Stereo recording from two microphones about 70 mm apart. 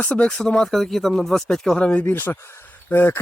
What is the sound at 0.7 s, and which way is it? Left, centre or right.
Speech, centre.